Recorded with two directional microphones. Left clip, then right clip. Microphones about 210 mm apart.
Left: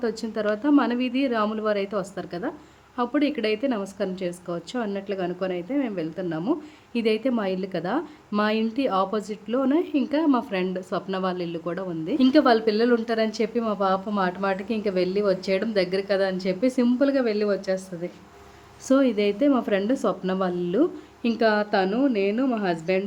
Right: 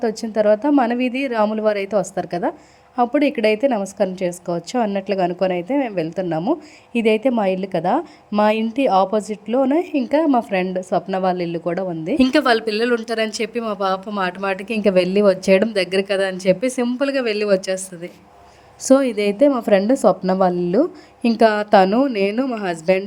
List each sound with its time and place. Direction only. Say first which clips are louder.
0.0 s a woman's voice: right 8 dB; 20° right (ahead or behind)
12.1 s speech: right 3 dB; 40° right (ahead or behind)